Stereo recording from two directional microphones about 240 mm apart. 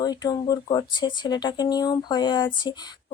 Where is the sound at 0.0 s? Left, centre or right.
Centre.